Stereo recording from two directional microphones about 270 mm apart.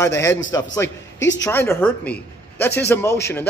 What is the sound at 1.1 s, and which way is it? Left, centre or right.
Speech, left.